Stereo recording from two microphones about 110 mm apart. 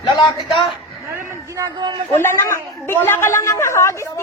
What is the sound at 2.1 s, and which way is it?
A woman's voice, 20° left (ahead or behind).